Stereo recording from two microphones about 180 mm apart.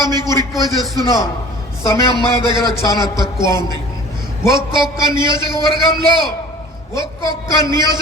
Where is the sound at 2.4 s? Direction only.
25° right (ahead or behind).